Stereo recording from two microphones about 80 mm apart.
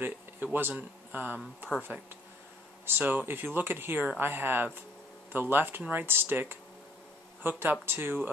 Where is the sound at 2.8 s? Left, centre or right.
Right.